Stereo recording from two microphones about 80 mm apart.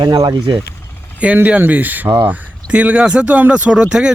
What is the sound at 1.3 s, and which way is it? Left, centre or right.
Speech, right.